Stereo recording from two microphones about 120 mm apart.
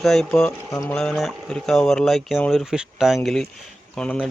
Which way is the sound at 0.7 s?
25° left (ahead or behind).